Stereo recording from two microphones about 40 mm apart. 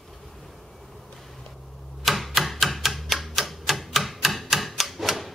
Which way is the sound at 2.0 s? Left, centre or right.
Centre.